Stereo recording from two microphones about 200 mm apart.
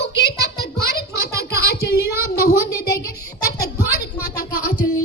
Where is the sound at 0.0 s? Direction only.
60° left (ahead or behind).